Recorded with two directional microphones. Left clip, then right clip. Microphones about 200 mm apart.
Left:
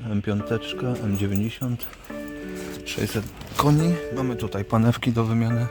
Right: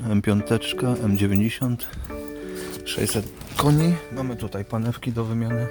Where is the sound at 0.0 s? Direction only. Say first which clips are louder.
Right 4 dB; 20° right (ahead or behind).